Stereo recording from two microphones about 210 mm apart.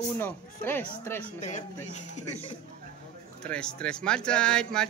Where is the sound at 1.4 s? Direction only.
35° left (ahead or behind).